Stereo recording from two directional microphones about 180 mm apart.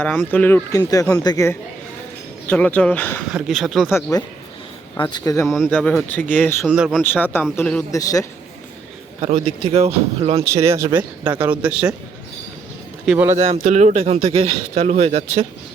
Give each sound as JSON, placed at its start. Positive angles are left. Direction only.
{"t": 0.0, "sound": "speech", "side_deg": 10}
{"t": 2.5, "sound": "speech", "side_deg": 10}
{"t": 3.2, "sound": "speech", "side_deg": -5}
{"t": 4.9, "sound": "speech", "side_deg": 25}
{"t": 5.5, "sound": "speech", "side_deg": 0}
{"t": 6.7, "sound": "speech", "side_deg": -5}
{"t": 7.0, "sound": "speech", "side_deg": 10}
{"t": 7.9, "sound": "speech", "side_deg": 20}
{"t": 9.2, "sound": "speech", "side_deg": -35}
{"t": 10.4, "sound": "speech", "side_deg": -15}
{"t": 13.1, "sound": "speech", "side_deg": -10}
{"t": 13.3, "sound": "speech", "side_deg": -35}